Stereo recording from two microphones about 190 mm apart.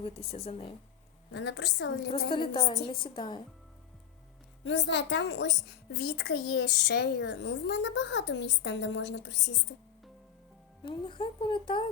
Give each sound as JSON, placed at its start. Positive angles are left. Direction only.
{"t": 1.3, "sound": "a woman's voice", "side_deg": 65}
{"t": 2.3, "sound": "a woman's voice", "side_deg": 25}
{"t": 4.6, "sound": "a child's voice", "side_deg": 65}
{"t": 10.8, "sound": "a woman's voice", "side_deg": 25}